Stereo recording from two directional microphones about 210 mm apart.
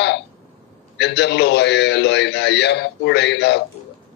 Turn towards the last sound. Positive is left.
turn(degrees=55)  # may be behind; listen again after turning